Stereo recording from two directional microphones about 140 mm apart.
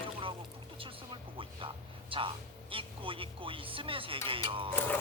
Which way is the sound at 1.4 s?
40° right (ahead or behind).